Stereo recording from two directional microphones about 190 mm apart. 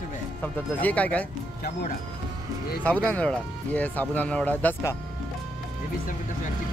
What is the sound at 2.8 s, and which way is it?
Speech, 5° left (ahead or behind).